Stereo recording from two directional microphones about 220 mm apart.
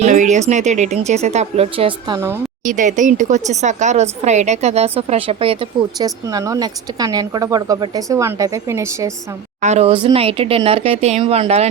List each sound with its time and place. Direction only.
0.0 s speech: 35° right (ahead or behind)
2.1 s a woman's voice: 10° right (ahead or behind)
2.6 s speech: 35° right (ahead or behind); by 9.1 s 15° right (ahead or behind)
9.6 s speech: 30° right (ahead or behind)